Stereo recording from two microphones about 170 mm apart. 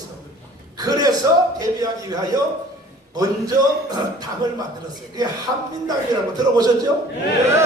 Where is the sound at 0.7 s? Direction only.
20° right (ahead or behind).